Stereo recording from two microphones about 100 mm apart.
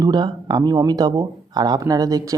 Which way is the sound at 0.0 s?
45° right (ahead or behind).